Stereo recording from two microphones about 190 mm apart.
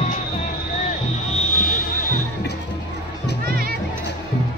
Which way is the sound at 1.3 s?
45° left (ahead or behind).